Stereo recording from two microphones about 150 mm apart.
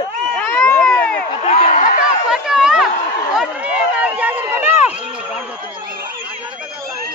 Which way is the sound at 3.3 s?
10° right (ahead or behind).